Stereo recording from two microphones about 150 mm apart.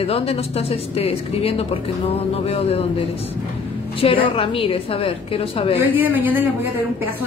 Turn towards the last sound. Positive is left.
turn(degrees=-10)  # may be behind; listen again after turning